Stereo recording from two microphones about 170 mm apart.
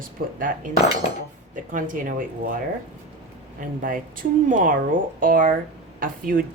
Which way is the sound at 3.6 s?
55° right (ahead or behind).